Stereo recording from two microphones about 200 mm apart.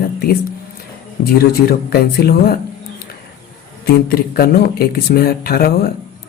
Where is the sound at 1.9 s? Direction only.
50° left (ahead or behind).